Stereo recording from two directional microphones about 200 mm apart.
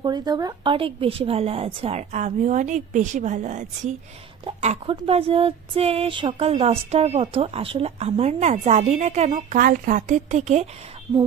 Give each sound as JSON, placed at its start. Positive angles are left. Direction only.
{"t": 0.0, "sound": "speech", "side_deg": -20}